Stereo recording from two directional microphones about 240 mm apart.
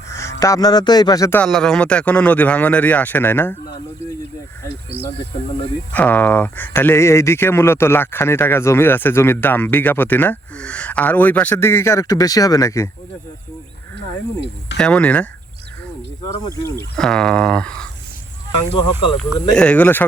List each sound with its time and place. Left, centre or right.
0.1 s speech: centre
4.9 s speech: right
5.9 s speech: centre
14.8 s speech: centre
17.0 s speech: centre
18.8 s speech: centre
19.5 s speech: centre